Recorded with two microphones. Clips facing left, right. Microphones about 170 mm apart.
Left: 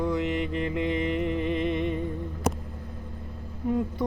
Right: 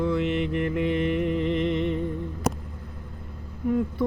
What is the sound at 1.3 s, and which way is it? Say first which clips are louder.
Music: right 2 dB; 15° left (ahead or behind).